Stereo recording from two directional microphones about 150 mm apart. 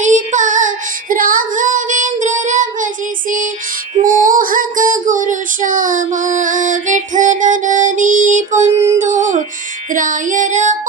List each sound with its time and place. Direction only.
0.0 s female singing: 55° right (ahead or behind)
1.1 s child singing: 70° right (ahead or behind)
4.0 s female singing: 65° right (ahead or behind)
9.9 s child singing: 60° right (ahead or behind)